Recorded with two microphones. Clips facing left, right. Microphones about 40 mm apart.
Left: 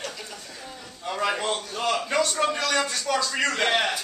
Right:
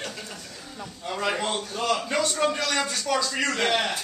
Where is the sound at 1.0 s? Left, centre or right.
Centre.